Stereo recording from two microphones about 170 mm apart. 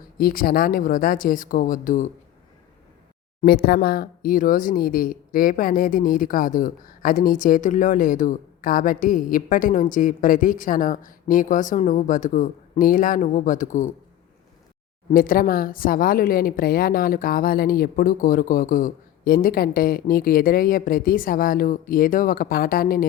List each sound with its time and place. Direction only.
0.2 s speech: 60° left (ahead or behind)
3.4 s speech: 70° left (ahead or behind); by 13.8 s 50° left (ahead or behind)
15.1 s speech: 55° left (ahead or behind)